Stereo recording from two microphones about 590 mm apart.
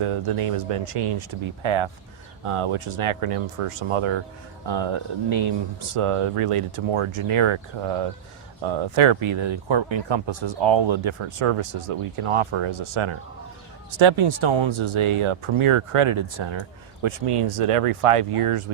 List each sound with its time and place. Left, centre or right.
0.0 s speech: right